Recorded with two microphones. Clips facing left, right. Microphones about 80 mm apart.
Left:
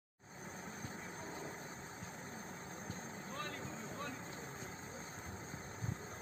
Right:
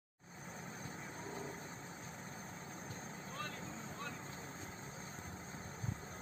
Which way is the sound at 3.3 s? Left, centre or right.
Left.